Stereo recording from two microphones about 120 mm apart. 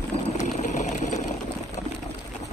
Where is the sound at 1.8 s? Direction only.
75° left (ahead or behind).